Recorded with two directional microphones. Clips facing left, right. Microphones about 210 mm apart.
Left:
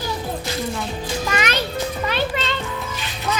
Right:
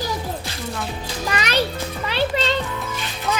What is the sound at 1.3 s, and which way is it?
Music, 35° right (ahead or behind).